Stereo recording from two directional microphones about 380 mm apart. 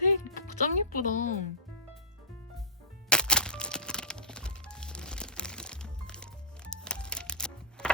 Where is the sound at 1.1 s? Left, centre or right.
Centre.